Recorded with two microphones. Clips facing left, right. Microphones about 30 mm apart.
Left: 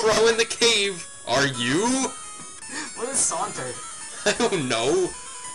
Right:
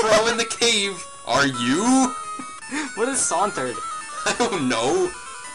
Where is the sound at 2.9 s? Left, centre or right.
Right.